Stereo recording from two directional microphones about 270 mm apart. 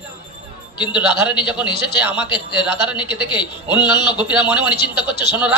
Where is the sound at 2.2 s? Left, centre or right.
Centre.